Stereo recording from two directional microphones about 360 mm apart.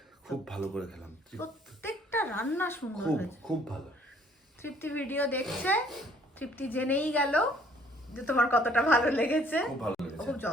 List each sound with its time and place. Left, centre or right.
0.3 s speech: centre
4.6 s speech: centre